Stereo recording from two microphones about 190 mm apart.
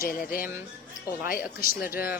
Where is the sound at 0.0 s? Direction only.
50° left (ahead or behind).